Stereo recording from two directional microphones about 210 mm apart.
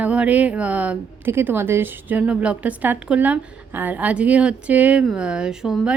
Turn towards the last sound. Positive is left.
turn(degrees=-5)  # may be behind; listen again after turning